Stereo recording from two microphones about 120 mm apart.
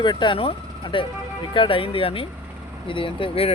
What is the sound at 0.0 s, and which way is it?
Speech, 40° left (ahead or behind).